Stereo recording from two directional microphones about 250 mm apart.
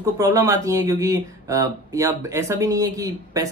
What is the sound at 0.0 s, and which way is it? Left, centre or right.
Speech, centre.